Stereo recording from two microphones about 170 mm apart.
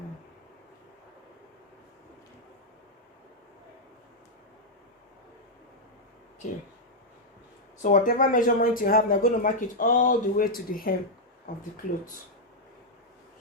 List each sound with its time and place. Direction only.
7.8 s speech: 50° left (ahead or behind)